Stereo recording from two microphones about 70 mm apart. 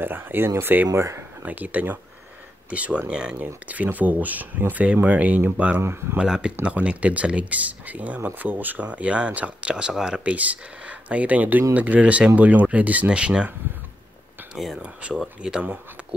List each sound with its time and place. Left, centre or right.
0.0 s speech: right
1.4 s speech: right
5.8 s speech: right
6.1 s speech: centre
14.5 s speech: centre
16.0 s a sound: centre